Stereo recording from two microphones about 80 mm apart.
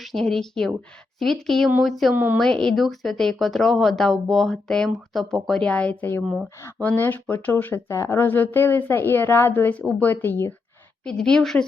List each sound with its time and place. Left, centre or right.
0.0 s speech: centre
2.1 s a woman's voice: right
2.4 s a woman's voice: centre; by 10.5 s left
11.0 s a woman's voice: centre